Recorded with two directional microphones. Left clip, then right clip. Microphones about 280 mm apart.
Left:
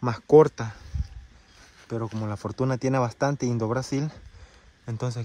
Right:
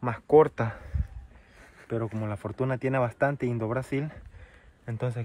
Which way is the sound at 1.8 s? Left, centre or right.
Centre.